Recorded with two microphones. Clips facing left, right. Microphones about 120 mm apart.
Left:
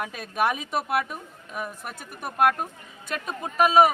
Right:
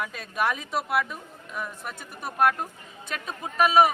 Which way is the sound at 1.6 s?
50° left (ahead or behind).